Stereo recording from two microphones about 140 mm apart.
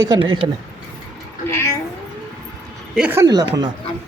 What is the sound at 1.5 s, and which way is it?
Cat, 15° left (ahead or behind).